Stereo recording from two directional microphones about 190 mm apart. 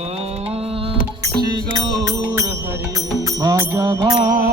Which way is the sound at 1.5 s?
20° right (ahead or behind).